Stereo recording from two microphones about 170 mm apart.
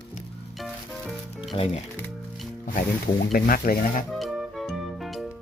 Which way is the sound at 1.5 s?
35° left (ahead or behind).